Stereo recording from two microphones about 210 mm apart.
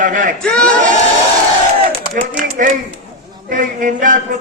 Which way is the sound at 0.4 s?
5° left (ahead or behind).